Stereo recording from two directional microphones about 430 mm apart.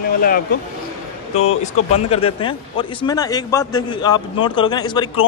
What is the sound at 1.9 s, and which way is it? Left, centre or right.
A man's voice, centre.